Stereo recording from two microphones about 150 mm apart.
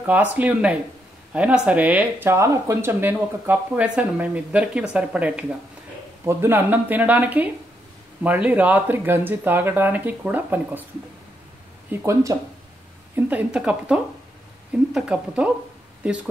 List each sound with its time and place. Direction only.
0.0 s speech: 10° right (ahead or behind)
11.9 s speech: 20° right (ahead or behind)
13.1 s speech: 10° right (ahead or behind)